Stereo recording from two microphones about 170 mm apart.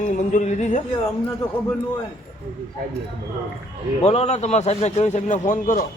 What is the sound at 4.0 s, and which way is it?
A man's voice, 40° left (ahead or behind).